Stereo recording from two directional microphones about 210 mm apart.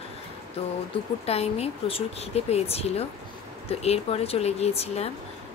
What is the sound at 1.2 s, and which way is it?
A woman's voice, 30° left (ahead or behind).